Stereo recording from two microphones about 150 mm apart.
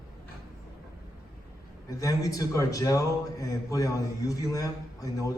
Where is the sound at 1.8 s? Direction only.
20° left (ahead or behind).